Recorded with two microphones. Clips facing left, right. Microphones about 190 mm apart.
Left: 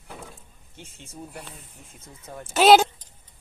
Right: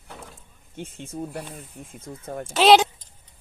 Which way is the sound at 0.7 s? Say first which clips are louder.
Right 9 dB; 55° right (ahead or behind).